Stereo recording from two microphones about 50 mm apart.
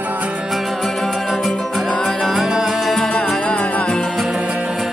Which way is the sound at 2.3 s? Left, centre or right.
Centre.